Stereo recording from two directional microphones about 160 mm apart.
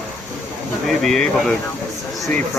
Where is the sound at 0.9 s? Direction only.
5° left (ahead or behind).